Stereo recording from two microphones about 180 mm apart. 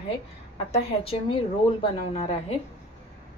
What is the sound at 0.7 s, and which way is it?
A woman's voice, 30° left (ahead or behind).